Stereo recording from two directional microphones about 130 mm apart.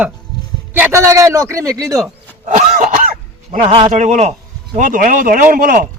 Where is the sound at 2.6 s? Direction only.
90° right; by 3.7 s 75° right (ahead or behind).